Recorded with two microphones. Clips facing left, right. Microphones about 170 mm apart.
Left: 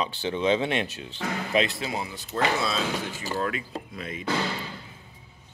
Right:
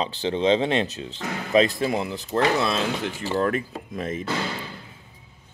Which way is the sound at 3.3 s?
50° right (ahead or behind).